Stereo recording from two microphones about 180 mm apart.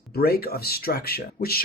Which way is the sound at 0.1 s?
60° left (ahead or behind).